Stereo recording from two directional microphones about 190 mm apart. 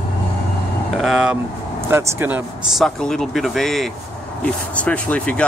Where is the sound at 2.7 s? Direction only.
Centre (ahead or behind).